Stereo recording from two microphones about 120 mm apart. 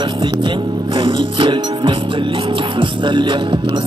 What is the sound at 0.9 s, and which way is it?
Music, 45° right (ahead or behind).